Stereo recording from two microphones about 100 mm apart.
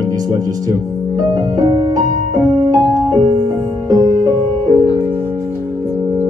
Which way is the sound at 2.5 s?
35° right (ahead or behind).